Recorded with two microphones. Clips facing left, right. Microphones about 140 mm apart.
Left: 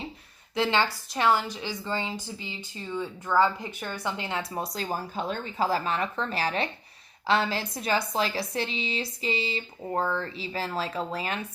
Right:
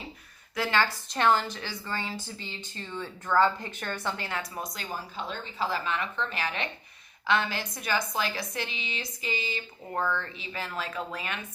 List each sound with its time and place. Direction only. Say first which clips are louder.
0.5 s a woman's voice: left 2 dB; 20° left (ahead or behind)